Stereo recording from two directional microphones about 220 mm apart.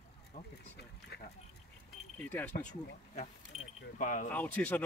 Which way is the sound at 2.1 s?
5° left (ahead or behind).